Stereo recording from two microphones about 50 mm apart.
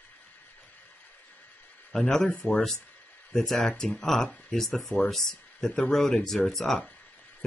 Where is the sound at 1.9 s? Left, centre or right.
Centre.